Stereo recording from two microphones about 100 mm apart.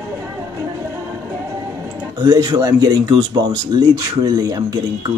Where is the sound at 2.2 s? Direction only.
40° right (ahead or behind).